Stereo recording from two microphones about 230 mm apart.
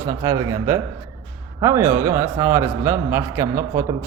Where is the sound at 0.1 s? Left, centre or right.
Centre.